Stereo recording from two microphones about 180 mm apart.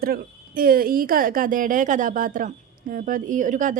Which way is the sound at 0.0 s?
55° right (ahead or behind).